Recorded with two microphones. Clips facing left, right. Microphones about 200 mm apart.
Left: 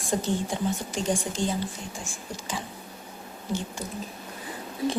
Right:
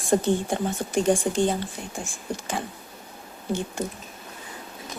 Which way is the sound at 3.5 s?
60° right (ahead or behind).